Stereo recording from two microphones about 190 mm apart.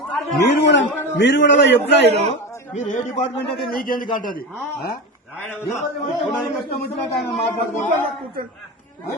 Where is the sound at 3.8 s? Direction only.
50° left (ahead or behind).